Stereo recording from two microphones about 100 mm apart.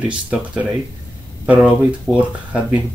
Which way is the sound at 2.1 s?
10° right (ahead or behind).